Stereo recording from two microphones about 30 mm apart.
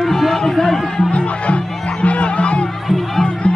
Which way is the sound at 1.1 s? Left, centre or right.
Left.